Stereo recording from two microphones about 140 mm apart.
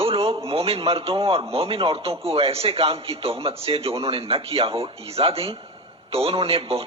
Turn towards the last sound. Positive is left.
turn(degrees=-45)  # may be behind; listen again after turning